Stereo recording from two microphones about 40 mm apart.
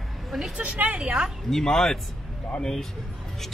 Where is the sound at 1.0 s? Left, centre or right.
Centre.